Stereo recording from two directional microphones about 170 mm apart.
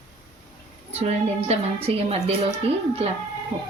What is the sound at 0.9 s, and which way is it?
Speech, 40° right (ahead or behind).